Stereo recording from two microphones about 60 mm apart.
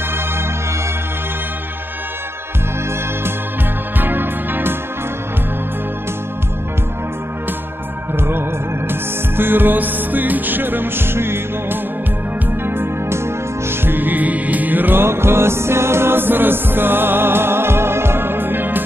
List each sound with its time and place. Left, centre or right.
4.0 s music: right
8.2 s music: right